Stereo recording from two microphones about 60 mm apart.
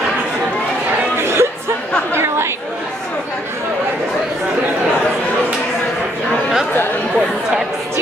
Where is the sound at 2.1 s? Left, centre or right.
Right.